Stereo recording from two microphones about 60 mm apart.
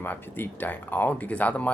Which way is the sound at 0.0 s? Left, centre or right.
Left.